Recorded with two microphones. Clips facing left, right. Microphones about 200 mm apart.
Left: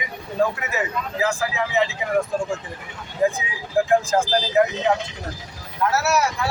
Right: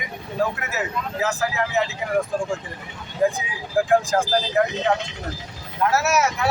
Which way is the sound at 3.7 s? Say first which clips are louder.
Even; centre (ahead or behind).